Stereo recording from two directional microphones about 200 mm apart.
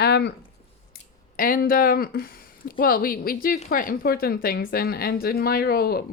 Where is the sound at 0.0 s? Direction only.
55° left (ahead or behind).